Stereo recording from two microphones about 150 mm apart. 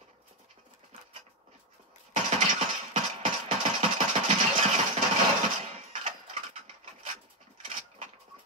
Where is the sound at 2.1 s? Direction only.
40° right (ahead or behind).